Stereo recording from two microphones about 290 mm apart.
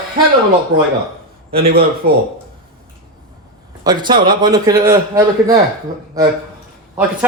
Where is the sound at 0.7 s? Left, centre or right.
Right.